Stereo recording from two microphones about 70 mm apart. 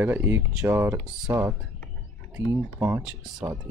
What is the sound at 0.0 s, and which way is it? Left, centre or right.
Speech, right.